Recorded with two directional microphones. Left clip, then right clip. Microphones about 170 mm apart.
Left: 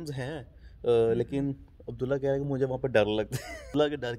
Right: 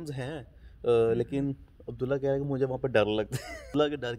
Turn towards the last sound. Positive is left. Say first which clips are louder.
# even
turn(degrees=-5)  # may be behind; listen again after turning